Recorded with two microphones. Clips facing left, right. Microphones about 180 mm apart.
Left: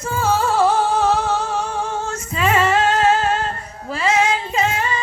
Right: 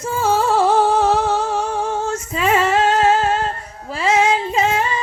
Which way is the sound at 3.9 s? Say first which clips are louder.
Right 2 dB; centre (ahead or behind).